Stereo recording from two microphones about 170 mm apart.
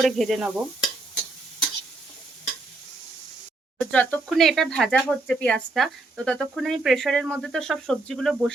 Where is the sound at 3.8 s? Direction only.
10° left (ahead or behind).